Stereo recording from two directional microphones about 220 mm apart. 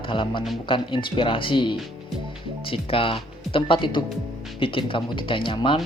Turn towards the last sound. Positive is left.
turn(degrees=20)  # may be behind; listen again after turning